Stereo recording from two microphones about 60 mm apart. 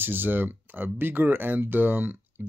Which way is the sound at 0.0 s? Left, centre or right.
Right.